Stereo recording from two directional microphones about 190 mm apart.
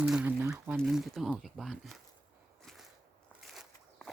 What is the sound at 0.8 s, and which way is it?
Speech, centre (ahead or behind).